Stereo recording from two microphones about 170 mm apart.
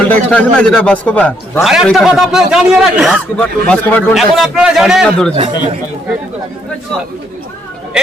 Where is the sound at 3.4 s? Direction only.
10° left (ahead or behind).